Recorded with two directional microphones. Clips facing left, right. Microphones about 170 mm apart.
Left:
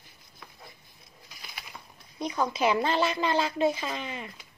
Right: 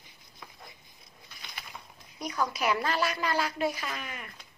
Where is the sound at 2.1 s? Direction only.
25° left (ahead or behind).